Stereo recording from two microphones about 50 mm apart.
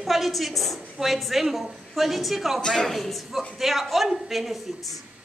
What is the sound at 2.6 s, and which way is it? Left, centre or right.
Speech, centre.